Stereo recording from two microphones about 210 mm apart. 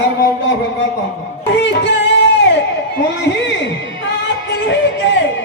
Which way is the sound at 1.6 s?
55° left (ahead or behind).